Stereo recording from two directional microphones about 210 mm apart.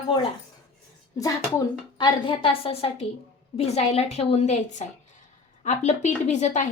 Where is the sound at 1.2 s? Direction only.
20° left (ahead or behind).